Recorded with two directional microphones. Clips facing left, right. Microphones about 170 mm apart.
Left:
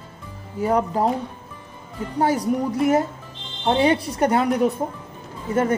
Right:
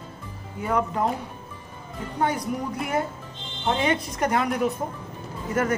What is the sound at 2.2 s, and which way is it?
A woman's voice, 35° left (ahead or behind).